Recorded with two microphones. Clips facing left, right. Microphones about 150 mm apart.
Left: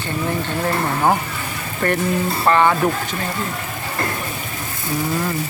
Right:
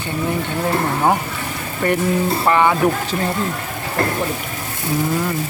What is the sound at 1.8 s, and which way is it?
Speech, 15° right (ahead or behind).